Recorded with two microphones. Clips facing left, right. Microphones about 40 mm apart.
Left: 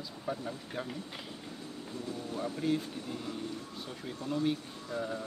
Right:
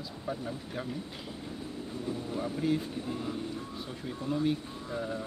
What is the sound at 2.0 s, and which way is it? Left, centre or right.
Speech, centre.